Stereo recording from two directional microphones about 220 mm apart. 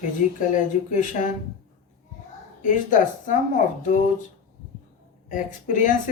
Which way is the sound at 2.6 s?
35° left (ahead or behind).